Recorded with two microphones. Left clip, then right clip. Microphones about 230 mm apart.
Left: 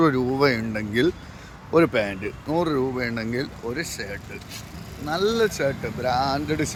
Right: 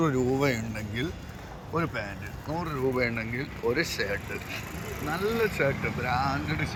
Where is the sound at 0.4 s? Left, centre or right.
Left.